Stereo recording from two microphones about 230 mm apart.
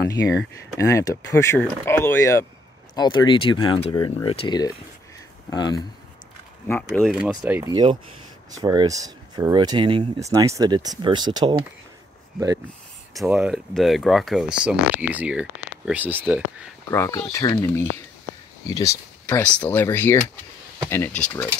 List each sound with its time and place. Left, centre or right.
0.7 s speech: centre
6.9 s speech: centre
13.1 s speech: centre
16.9 s speech: centre